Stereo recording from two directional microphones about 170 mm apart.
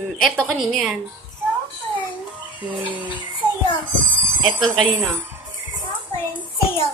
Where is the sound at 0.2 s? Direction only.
5° left (ahead or behind).